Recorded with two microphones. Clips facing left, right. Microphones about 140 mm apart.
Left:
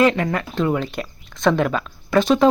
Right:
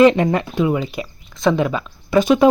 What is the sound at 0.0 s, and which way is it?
Speech, 20° right (ahead or behind).